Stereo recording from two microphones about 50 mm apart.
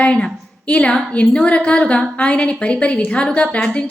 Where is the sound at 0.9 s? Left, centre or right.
Left.